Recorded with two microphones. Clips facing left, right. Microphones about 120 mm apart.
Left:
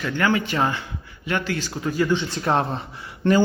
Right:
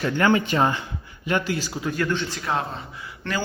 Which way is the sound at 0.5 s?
20° right (ahead or behind).